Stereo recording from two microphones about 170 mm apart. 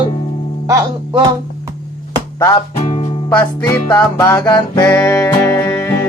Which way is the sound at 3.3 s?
15° left (ahead or behind).